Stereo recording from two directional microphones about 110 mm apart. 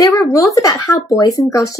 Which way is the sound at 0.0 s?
30° left (ahead or behind).